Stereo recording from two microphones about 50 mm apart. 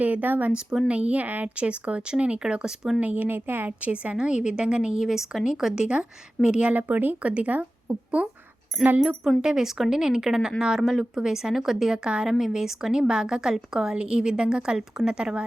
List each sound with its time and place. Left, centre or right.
0.0 s a woman's voice: right; by 2.7 s centre
3.0 s speech: right
3.7 s a woman's voice: right
9.4 s a woman's voice: centre
14.8 s a woman's voice: centre